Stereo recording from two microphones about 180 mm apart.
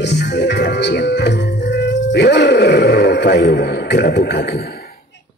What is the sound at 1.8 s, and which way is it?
Speech, 70° left (ahead or behind).